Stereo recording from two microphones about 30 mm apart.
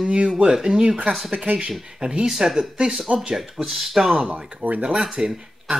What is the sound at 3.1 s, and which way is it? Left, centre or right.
Speech, right.